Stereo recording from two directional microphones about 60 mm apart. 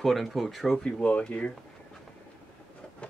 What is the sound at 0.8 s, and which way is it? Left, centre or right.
Speech, centre.